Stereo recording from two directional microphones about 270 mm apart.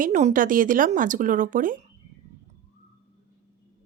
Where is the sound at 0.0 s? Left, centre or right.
Right.